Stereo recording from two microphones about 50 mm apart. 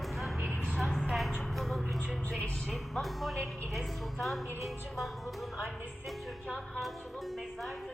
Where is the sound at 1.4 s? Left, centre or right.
Centre.